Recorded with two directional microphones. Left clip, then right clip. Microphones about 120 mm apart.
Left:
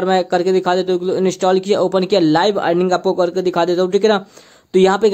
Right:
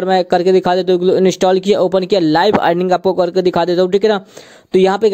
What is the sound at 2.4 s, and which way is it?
Speech, 70° right (ahead or behind).